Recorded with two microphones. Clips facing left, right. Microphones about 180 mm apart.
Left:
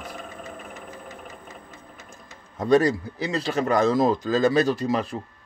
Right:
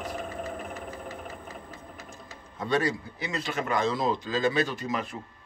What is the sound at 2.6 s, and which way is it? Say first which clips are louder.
Speech: left 8 dB; 40° left (ahead or behind).